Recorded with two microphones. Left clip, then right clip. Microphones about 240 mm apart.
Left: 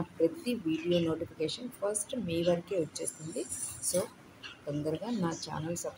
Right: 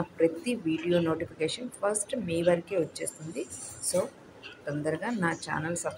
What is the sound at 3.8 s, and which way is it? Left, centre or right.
Speech, left.